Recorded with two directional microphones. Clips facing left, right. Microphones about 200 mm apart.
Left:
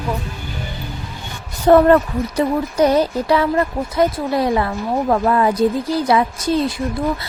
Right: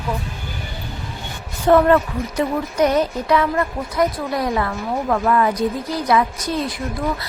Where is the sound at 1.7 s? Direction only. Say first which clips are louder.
Left 3 dB; 35° left (ahead or behind).